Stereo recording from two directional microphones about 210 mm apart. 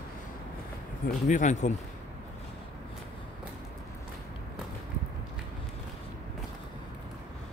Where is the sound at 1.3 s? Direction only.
35° left (ahead or behind).